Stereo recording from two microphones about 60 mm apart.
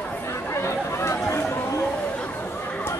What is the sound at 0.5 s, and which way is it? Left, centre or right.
Chatter, left.